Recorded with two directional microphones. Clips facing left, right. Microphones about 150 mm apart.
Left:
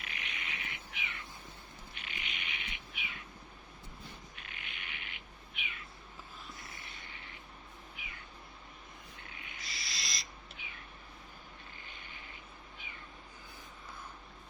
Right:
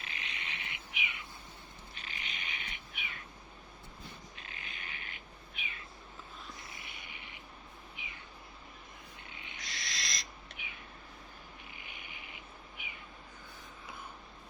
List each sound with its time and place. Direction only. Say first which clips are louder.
0.0 s bird: even; 30° right (ahead or behind)
2.0 s bird: even; 35° right (ahead or behind)
4.4 s cat: right 1 dB; 30° right (ahead or behind)
6.6 s a sound: even; 20° right (ahead or behind)
7.9 s cat: right 1 dB; 20° right (ahead or behind)
9.3 s owl: even; 25° right (ahead or behind)
9.6 s owl: right 3 dB; centre (ahead or behind)
10.6 s cat: right 3 dB; 15° right (ahead or behind)
11.8 s a sound: right 1 dB; 15° right (ahead or behind)
12.8 s cat: right 3 dB; 15° right (ahead or behind)